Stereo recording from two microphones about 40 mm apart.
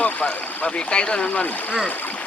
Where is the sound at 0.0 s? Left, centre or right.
Left.